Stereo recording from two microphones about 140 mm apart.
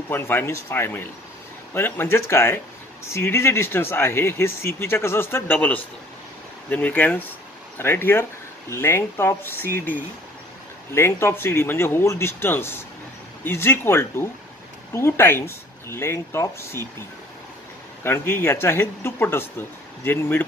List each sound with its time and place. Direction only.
0.1 s speech: 15° left (ahead or behind)
18.0 s speech: 15° left (ahead or behind)